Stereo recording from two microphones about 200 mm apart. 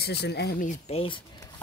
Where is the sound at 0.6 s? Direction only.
35° left (ahead or behind).